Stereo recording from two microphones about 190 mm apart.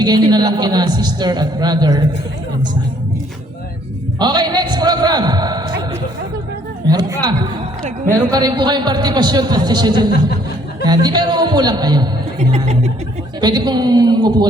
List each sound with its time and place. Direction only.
0.3 s a man's voice: 20° right (ahead or behind)
4.2 s a sound: 20° right (ahead or behind)
6.8 s a man's voice: 20° right (ahead or behind)
12.4 s speech: 35° right (ahead or behind)
13.4 s a man's voice: 20° right (ahead or behind)